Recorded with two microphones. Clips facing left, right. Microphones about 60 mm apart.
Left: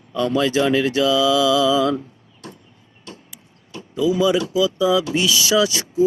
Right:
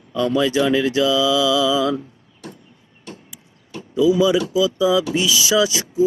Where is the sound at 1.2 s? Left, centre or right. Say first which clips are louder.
Left 1 dB; left.